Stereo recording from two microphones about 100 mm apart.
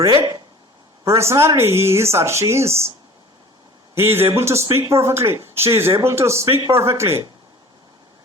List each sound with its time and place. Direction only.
0.0 s speech: 30° right (ahead or behind)
3.9 s speech: 25° right (ahead or behind)